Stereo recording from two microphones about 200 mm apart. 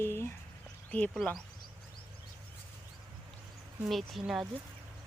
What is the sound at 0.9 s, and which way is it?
Speech, 5° left (ahead or behind).